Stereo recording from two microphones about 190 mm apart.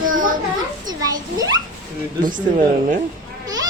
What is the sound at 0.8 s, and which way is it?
Speech, 20° right (ahead or behind).